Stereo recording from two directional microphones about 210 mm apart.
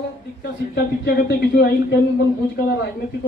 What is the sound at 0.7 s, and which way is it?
Speech, 50° left (ahead or behind).